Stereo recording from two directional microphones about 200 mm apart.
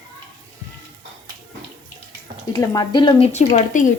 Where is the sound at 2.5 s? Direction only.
15° left (ahead or behind).